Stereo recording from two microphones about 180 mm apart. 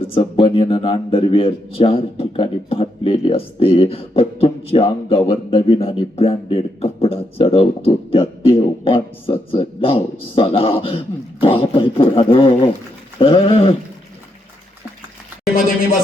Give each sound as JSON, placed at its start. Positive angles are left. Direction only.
{"t": 0.1, "sound": "a man's voice", "side_deg": 30}